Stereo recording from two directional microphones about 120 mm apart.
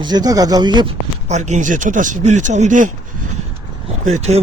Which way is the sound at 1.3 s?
80° right.